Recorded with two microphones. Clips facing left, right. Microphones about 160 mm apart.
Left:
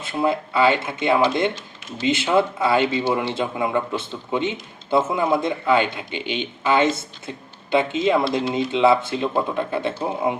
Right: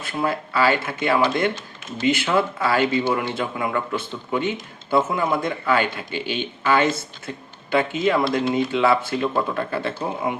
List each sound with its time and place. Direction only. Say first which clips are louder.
0.0 s speech: left 3 dB; 20° left (ahead or behind)